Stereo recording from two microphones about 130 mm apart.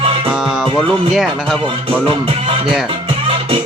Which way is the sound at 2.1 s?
45° right (ahead or behind).